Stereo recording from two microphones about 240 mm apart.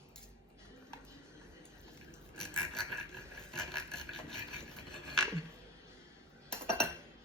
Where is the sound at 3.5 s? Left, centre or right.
Centre.